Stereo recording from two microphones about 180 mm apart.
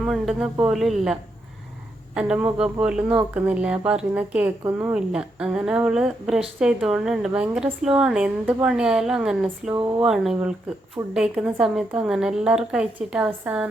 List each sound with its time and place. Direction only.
0.0 s speech: centre (ahead or behind)